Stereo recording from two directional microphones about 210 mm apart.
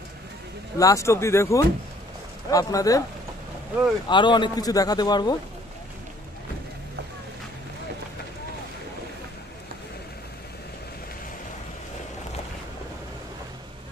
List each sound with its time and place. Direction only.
0.7 s speech: 15° left (ahead or behind)
4.1 s a man's voice: 20° left (ahead or behind)